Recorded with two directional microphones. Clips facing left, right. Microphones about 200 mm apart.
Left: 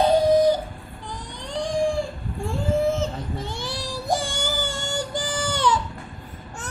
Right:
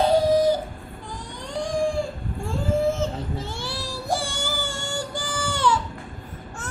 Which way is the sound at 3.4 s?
15° left (ahead or behind).